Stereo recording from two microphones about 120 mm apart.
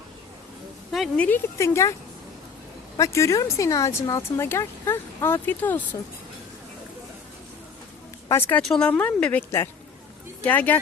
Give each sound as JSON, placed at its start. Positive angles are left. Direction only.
{"t": 0.9, "sound": "a woman's voice", "side_deg": 0}
{"t": 1.5, "sound": "speech", "side_deg": 25}
{"t": 3.0, "sound": "speech", "side_deg": 25}
{"t": 8.3, "sound": "speech", "side_deg": 20}
{"t": 8.6, "sound": "speech", "side_deg": 5}